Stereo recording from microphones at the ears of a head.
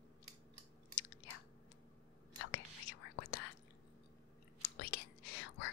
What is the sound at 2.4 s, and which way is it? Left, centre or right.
Whispering, left.